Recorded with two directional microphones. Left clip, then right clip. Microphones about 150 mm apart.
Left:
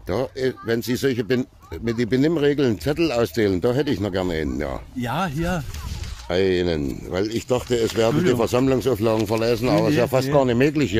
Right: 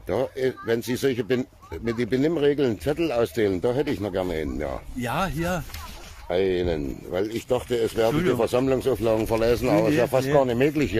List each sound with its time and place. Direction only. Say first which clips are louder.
0.1 s speech: left 1 dB; 30° left (ahead or behind); by 4.7 s 50° left (ahead or behind)
5.0 s speech: left 1 dB; 30° left (ahead or behind)
6.2 s speech: left 3 dB; 50° left (ahead or behind)
9.3 s speech: left 1 dB; 35° left (ahead or behind)
9.8 s speech: left 2 dB; 55° left (ahead or behind)
10.6 s speech: left 2 dB; 30° left (ahead or behind)